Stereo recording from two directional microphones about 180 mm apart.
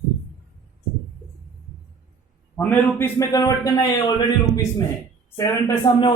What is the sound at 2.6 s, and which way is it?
A man's voice, 10° left (ahead or behind).